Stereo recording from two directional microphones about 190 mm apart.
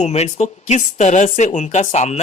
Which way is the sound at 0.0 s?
35° left (ahead or behind).